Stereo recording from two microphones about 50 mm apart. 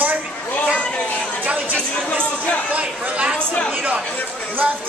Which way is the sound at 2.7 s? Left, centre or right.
Right.